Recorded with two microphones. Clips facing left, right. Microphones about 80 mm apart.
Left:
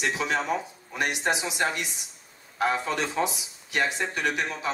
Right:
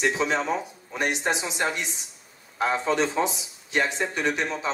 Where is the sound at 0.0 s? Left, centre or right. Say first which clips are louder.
Right 3 dB; right.